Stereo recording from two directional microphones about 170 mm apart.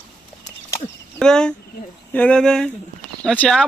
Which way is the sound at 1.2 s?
5° left (ahead or behind).